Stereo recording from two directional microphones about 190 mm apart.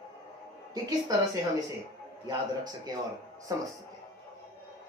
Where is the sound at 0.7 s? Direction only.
20° right (ahead or behind).